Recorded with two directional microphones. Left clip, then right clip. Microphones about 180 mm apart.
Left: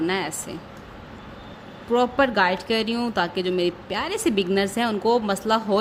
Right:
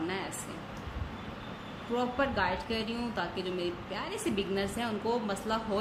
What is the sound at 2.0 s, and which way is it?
Speech, 55° left (ahead or behind).